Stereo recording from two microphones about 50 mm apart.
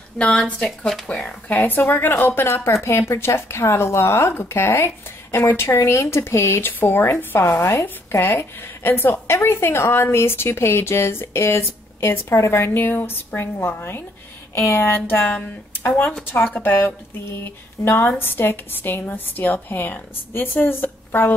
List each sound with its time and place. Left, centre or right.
0.2 s speech: centre
1.5 s a woman's voice: left
2.4 s a woman's voice: left
9.3 s a woman's voice: left
14.5 s speech: left
14.8 s a woman's voice: left
16.6 s a woman's voice: left